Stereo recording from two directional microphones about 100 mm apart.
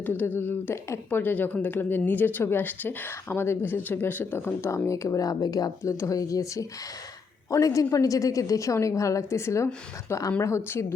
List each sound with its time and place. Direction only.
0.0 s a woman's voice: 20° left (ahead or behind)